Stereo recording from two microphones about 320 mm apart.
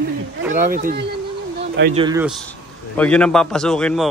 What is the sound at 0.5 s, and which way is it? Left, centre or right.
Speech, right.